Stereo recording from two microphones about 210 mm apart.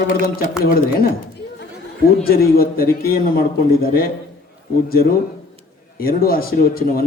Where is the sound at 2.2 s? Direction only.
45° left (ahead or behind).